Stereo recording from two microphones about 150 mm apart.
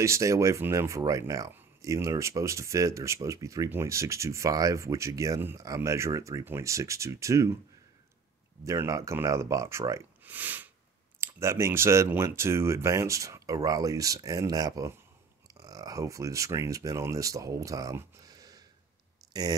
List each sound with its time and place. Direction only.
0.0 s speech: 20° right (ahead or behind)
8.6 s speech: 20° right (ahead or behind)
19.2 s clicking: 25° right (ahead or behind)